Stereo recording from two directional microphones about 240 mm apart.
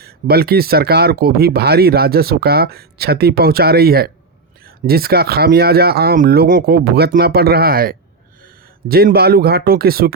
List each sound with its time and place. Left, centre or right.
0.0 s speech: right